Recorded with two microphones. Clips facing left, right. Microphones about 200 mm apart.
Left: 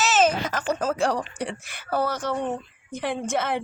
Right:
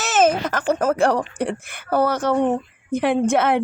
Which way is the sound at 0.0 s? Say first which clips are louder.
Right 3 dB; 55° right (ahead or behind).